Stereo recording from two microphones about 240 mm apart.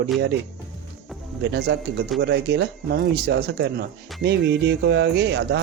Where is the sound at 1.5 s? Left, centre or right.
Right.